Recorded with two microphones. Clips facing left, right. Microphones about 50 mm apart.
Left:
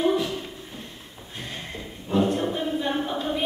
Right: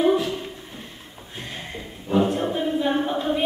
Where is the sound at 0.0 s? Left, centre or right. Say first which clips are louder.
Right 3 dB; centre.